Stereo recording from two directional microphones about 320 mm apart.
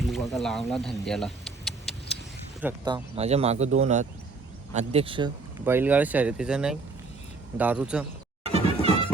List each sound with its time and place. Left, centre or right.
0.0 s a sound: centre
2.6 s speech: centre
8.5 s music: centre